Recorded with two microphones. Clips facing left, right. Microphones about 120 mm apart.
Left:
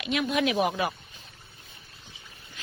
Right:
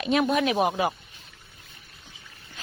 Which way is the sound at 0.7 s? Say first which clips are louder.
Right 3 dB; 25° right (ahead or behind).